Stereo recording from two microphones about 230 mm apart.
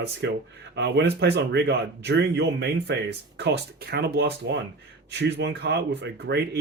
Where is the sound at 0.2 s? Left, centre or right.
Right.